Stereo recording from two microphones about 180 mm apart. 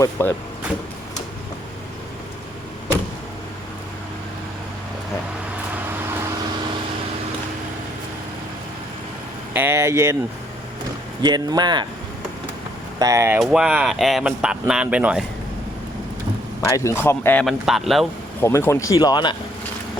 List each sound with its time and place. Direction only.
0.0 s speech: 10° left (ahead or behind)
9.5 s speech: 10° right (ahead or behind)
11.2 s speech: 25° right (ahead or behind)
13.0 s speech: 20° right (ahead or behind)
13.4 s speech: 5° right (ahead or behind)
16.6 s speech: 15° left (ahead or behind)
17.4 s speech: centre (ahead or behind)
18.3 s speech: 10° left (ahead or behind)